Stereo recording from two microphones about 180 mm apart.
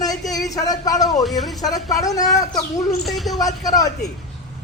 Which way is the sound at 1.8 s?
20° left (ahead or behind).